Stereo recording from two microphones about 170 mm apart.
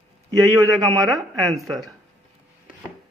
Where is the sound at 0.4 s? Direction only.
15° right (ahead or behind).